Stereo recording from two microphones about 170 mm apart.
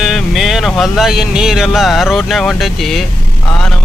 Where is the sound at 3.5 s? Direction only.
5° left (ahead or behind).